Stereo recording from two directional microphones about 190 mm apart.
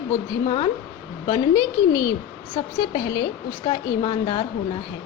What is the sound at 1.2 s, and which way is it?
Speech, 20° left (ahead or behind).